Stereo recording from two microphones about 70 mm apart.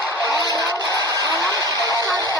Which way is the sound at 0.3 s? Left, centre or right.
Left.